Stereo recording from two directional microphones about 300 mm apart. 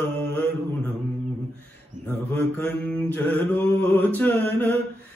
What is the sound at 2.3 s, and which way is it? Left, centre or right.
Mantra, centre.